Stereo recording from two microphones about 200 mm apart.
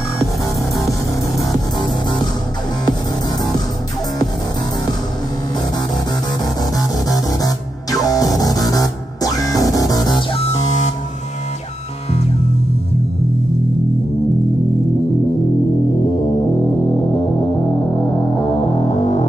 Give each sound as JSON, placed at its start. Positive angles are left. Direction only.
{"t": 6.4, "sound": "music", "side_deg": 20}
{"t": 17.9, "sound": "music", "side_deg": 20}
{"t": 18.9, "sound": "hum", "side_deg": 30}